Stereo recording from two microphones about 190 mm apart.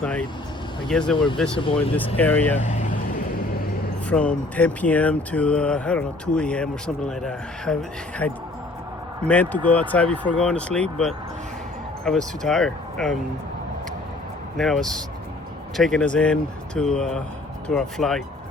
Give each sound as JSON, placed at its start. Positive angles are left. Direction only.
{"t": 0.9, "sound": "speech", "side_deg": 5}
{"t": 1.5, "sound": "speech", "side_deg": 30}
{"t": 2.1, "sound": "speech", "side_deg": 10}
{"t": 2.6, "sound": "vehicle", "side_deg": 40}
{"t": 4.1, "sound": "speech", "side_deg": 5}
{"t": 14.5, "sound": "speech", "side_deg": 0}